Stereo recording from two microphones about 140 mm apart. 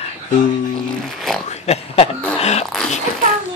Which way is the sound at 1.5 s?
50° left (ahead or behind).